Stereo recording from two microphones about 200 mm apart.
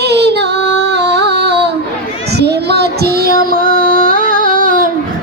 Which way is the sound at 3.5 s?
45° right (ahead or behind).